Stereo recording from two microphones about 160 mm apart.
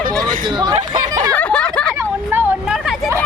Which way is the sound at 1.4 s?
10° left (ahead or behind).